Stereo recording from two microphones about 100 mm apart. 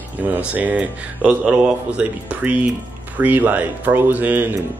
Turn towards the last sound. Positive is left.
turn(degrees=-20)  # may be behind; listen again after turning